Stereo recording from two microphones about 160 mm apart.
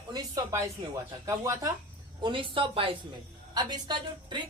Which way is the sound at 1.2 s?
20° right (ahead or behind).